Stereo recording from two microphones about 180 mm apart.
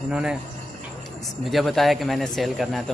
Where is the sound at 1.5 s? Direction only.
Centre (ahead or behind).